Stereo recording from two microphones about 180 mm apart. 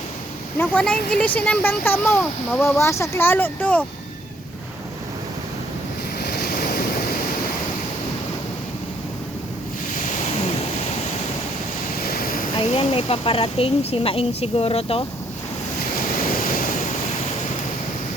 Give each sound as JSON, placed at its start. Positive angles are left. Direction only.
{"t": 0.6, "sound": "speech", "side_deg": 5}
{"t": 6.2, "sound": "waves", "side_deg": 60}
{"t": 11.9, "sound": "vehicle", "side_deg": 55}
{"t": 12.6, "sound": "speech", "side_deg": 35}
{"t": 16.0, "sound": "waves", "side_deg": 50}